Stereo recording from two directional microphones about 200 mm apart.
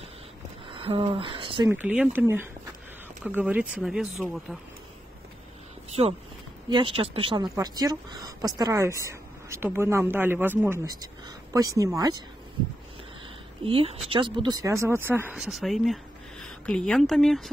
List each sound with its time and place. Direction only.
0.7 s speech: 25° right (ahead or behind)
1.7 s speech: 10° right (ahead or behind)
6.0 s speech: 25° right (ahead or behind)
13.7 s speech: 30° right (ahead or behind); by 17.5 s centre (ahead or behind)